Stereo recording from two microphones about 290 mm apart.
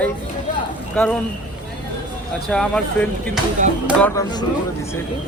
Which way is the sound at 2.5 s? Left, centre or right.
Centre.